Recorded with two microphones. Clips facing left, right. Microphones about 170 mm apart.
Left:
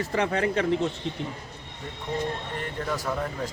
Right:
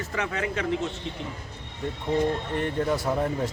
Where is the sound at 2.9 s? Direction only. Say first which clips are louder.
Right 4 dB; 25° right (ahead or behind).